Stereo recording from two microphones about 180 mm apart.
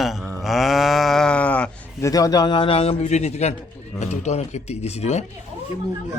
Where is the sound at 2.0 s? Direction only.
20° left (ahead or behind); by 5.2 s 35° left (ahead or behind).